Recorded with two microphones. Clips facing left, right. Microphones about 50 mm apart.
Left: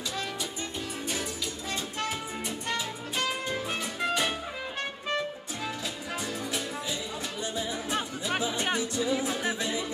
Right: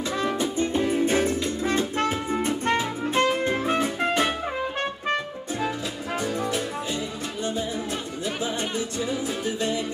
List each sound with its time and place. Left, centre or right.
0.2 s music: right